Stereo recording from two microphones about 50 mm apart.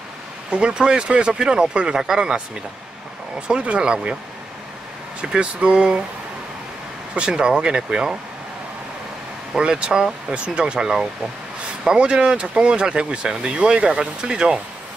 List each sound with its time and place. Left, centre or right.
0.5 s speech: right
5.2 s speech: centre
7.2 s speech: centre
9.6 s speech: centre